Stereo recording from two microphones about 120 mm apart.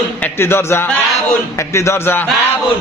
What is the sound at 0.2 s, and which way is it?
Speech, 20° left (ahead or behind).